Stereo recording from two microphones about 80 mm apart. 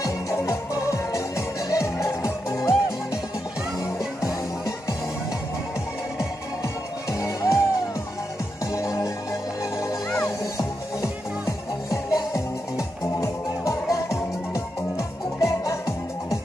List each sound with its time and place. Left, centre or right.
0.0 s music: left
4.2 s music: left
6.1 s music: left
8.7 s music: left